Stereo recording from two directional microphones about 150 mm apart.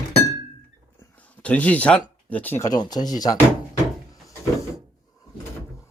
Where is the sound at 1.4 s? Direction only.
10° left (ahead or behind).